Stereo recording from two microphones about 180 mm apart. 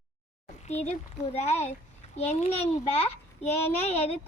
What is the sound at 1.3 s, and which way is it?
A child's voice, 35° left (ahead or behind).